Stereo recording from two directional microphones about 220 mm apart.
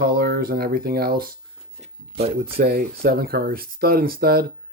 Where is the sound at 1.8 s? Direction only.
25° right (ahead or behind).